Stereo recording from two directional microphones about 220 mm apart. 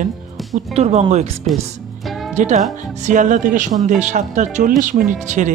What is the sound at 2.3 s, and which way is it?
Speech, 30° right (ahead or behind).